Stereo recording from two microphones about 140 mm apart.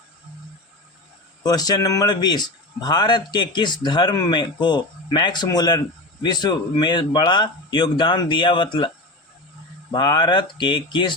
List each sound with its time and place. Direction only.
1.5 s a man's voice: 25° left (ahead or behind)
9.9 s a man's voice: 30° left (ahead or behind)